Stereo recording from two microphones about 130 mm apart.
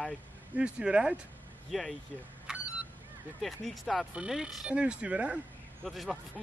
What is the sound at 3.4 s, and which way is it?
Speech, centre (ahead or behind).